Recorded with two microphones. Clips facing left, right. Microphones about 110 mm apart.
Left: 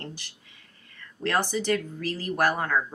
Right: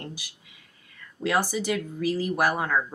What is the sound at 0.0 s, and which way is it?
Speech, 10° right (ahead or behind).